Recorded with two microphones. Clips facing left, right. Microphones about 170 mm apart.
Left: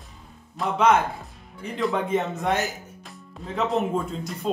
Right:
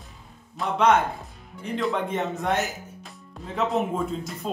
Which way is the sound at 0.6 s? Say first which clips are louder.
Even; centre (ahead or behind).